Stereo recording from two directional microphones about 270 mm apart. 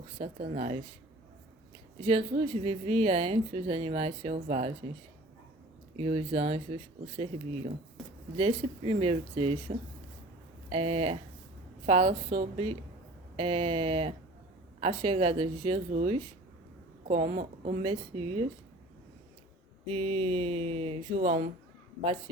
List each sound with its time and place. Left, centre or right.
0.2 s a woman's voice: right
2.0 s a woman's voice: right
6.0 s a woman's voice: right
10.7 s a woman's voice: right
19.9 s a woman's voice: right